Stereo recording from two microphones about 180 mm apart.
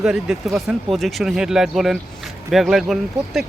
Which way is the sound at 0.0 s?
5° right (ahead or behind).